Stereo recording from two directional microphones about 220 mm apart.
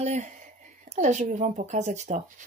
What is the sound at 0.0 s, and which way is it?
Speech, 30° right (ahead or behind).